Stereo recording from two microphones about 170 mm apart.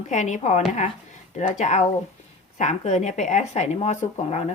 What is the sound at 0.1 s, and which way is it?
A woman's voice, 45° left (ahead or behind).